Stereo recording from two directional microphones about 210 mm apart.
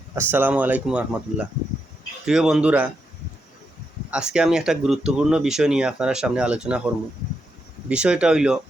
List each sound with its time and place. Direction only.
0.1 s speech: 10° right (ahead or behind)
4.1 s speech: 5° right (ahead or behind)